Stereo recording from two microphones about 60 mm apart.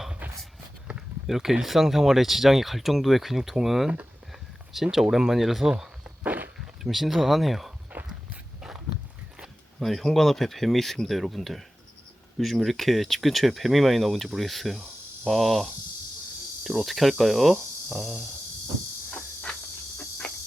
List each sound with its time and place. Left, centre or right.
1.3 s speech: centre
6.2 s walk: right
6.8 s speech: centre
7.9 s walk: right
9.8 s speech: centre
19.1 s insect: left